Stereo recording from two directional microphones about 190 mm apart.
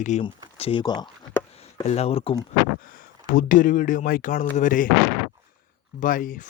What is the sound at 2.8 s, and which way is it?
Speech, 50° left (ahead or behind).